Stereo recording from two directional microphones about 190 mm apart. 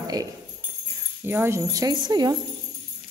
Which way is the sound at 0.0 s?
20° right (ahead or behind).